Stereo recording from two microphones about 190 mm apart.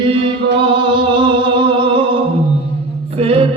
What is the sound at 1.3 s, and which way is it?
Music, 25° right (ahead or behind).